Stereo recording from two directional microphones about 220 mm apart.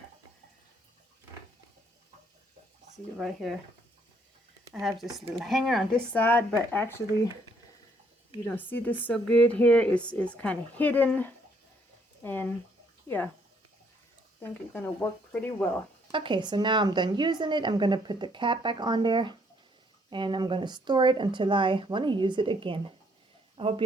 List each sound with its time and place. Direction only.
3.2 s speech: centre (ahead or behind)
4.7 s speech: centre (ahead or behind)
8.4 s speech: 10° left (ahead or behind)
14.4 s speech: 10° left (ahead or behind)
16.1 s speech: 20° right (ahead or behind)